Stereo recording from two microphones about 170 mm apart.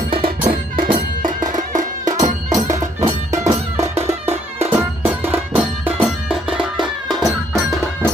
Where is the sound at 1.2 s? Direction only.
50° right (ahead or behind).